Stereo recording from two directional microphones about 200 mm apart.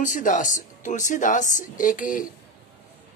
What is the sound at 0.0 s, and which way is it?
Speech, 40° left (ahead or behind).